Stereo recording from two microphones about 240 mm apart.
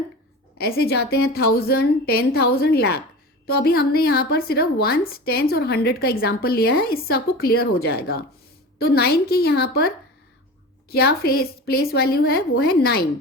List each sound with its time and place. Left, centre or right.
0.6 s a woman's voice: left